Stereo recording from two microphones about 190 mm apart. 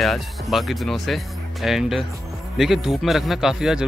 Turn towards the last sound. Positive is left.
turn(degrees=-5)  # may be behind; listen again after turning